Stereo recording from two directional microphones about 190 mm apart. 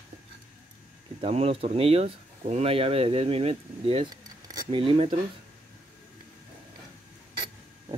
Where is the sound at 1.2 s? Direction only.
30° right (ahead or behind).